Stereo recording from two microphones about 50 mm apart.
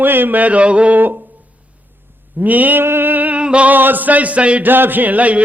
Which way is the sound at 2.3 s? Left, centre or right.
Right.